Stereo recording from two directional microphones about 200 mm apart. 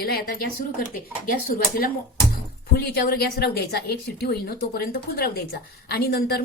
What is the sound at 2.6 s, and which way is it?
A woman's voice, 50° left (ahead or behind).